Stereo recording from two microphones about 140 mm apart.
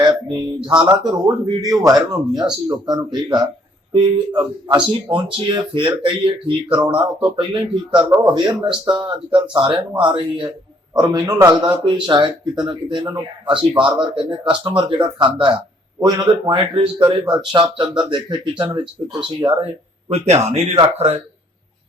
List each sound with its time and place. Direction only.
1.0 s speech: 30° right (ahead or behind)
20.1 s speech: 50° right (ahead or behind)